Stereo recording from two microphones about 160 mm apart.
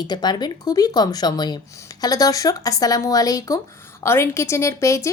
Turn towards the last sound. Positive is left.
turn(degrees=20)  # may be behind; listen again after turning